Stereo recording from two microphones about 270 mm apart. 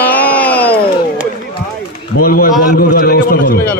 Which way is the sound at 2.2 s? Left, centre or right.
Left.